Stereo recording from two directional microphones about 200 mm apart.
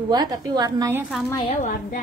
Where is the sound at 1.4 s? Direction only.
40° left (ahead or behind).